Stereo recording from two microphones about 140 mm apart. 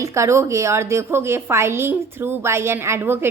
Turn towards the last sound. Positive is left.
turn(degrees=-15)  # may be behind; listen again after turning